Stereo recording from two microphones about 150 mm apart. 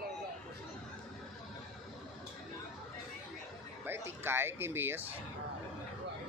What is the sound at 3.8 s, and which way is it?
Speech, 15° right (ahead or behind).